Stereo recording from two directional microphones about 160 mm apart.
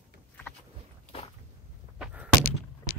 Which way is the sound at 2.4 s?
65° left (ahead or behind).